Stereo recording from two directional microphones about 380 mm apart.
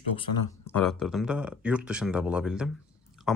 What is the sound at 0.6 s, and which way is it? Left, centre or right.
Speech, centre.